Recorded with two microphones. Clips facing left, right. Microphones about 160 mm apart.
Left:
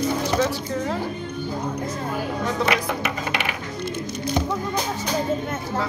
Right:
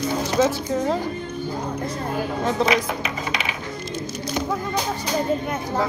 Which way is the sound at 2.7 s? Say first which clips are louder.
Right 1 dB; 70° left (ahead or behind).